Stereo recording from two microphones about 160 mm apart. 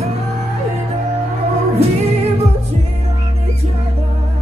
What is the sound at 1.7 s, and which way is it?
Music, 40° right (ahead or behind).